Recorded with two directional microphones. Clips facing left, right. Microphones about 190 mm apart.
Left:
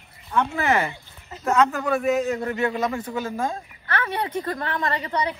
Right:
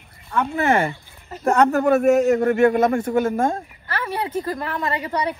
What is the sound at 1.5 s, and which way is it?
A man's voice, 55° right (ahead or behind).